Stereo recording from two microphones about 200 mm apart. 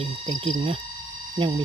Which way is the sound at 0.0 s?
30° right (ahead or behind).